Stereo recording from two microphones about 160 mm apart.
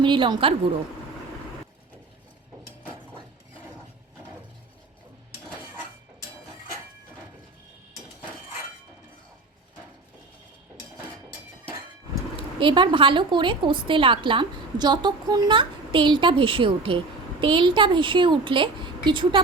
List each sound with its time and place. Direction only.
0.0 s a woman's voice: 30° right (ahead or behind)
12.5 s a woman's voice: 30° right (ahead or behind)